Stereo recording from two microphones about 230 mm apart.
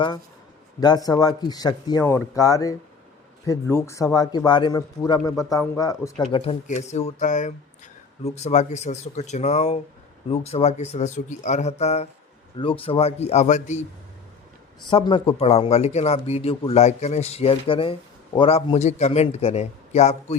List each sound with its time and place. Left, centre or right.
0.8 s a man's voice: centre
6.3 s a man's voice: left
14.8 s a man's voice: left